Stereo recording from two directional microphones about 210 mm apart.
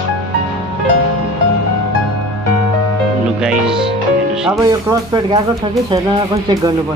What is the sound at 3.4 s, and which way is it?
Music, 5° right (ahead or behind).